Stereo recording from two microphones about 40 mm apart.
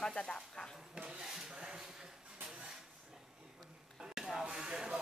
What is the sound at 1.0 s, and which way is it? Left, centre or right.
Speech, right.